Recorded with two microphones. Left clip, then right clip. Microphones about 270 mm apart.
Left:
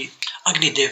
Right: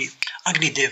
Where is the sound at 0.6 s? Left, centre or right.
Right.